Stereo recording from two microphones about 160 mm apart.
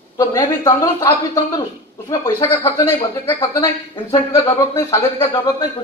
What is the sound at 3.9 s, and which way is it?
A woman's voice, 20° left (ahead or behind).